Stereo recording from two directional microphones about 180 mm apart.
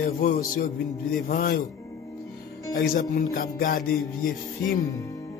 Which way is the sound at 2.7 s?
50° left (ahead or behind).